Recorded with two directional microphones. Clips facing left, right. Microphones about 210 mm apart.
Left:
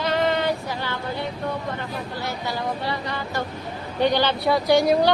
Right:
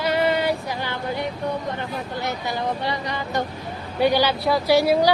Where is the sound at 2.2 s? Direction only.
20° right (ahead or behind).